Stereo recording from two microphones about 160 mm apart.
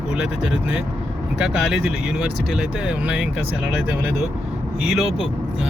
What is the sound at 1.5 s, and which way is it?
Speech, 5° right (ahead or behind).